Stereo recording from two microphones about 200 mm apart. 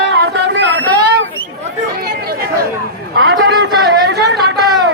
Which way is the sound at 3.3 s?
55° right (ahead or behind).